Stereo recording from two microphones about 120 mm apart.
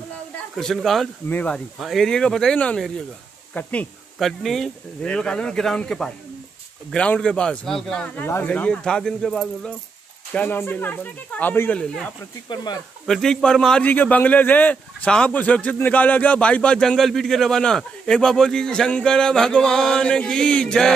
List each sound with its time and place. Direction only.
0.6 s speech: centre (ahead or behind)
1.3 s speech: 10° left (ahead or behind)
1.8 s speech: centre (ahead or behind)
4.2 s speech: centre (ahead or behind)
10.3 s speech: 15° left (ahead or behind)
11.8 s speech: 5° left (ahead or behind)